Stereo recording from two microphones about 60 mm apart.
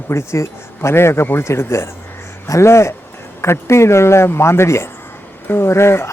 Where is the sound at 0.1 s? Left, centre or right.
Left.